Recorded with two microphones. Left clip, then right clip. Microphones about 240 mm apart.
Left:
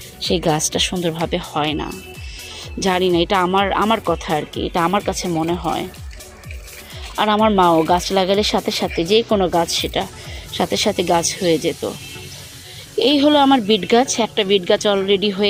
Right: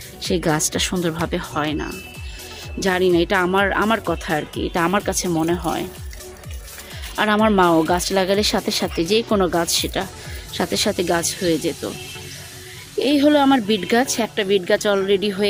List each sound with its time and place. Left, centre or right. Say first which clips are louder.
0.2 s speech: left 2 dB; centre
7.2 s speech: left 2 dB; centre
13.0 s speech: left 2 dB; centre